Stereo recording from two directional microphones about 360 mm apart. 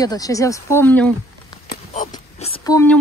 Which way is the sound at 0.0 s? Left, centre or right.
Centre.